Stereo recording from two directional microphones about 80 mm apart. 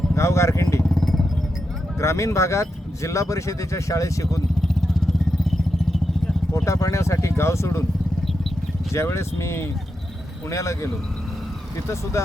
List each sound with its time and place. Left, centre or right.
0.1 s speech: left
0.9 s vehicle: centre
2.0 s speech: left
4.6 s vehicle: centre
6.7 s speech: left
8.9 s speech: left
12.2 s speech: left